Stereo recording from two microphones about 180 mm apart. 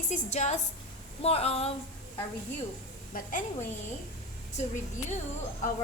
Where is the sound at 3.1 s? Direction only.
45° left (ahead or behind).